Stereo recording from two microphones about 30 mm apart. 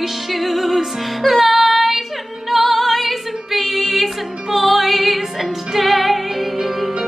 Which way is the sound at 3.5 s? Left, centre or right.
Centre.